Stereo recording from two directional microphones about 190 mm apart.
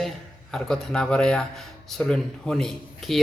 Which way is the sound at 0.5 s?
5° left (ahead or behind).